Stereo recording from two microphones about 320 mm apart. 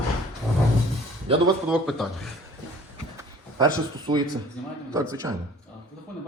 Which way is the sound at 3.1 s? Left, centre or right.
Centre.